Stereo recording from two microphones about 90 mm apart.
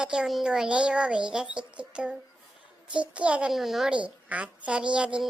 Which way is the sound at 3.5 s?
5° right (ahead or behind).